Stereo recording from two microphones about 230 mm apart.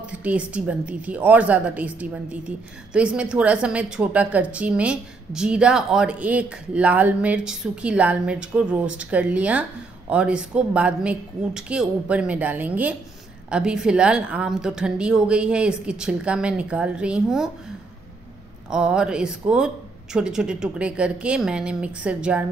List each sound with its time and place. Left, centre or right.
0.0 s a woman's voice: centre
18.7 s a woman's voice: centre